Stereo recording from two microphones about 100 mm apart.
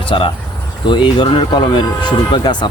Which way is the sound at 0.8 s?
50° left (ahead or behind).